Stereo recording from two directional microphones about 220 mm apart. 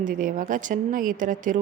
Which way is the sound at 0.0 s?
35° right (ahead or behind).